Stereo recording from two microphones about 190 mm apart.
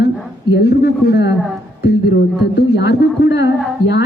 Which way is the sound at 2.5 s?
60° left (ahead or behind).